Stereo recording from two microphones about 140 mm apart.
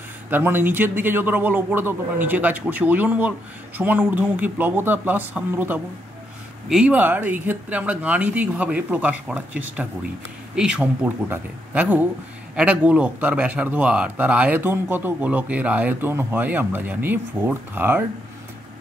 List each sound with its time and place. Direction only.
0.3 s speech: 15° right (ahead or behind)